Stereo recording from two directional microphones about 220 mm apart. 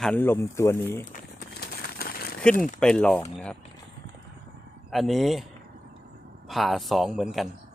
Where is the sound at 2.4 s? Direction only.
5° left (ahead or behind).